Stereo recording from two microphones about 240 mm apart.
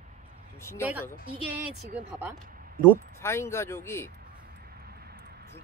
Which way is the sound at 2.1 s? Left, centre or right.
Centre.